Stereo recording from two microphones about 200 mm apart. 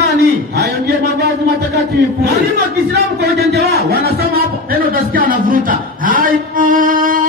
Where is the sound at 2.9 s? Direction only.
55° right (ahead or behind).